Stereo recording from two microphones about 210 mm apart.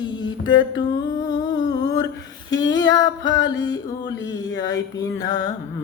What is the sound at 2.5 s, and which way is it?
Speech, 15° left (ahead or behind).